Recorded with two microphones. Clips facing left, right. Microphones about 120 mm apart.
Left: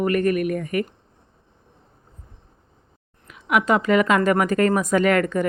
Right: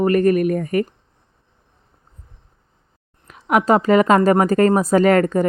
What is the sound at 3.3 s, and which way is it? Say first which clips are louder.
Speech: right 4 dB; 40° right (ahead or behind).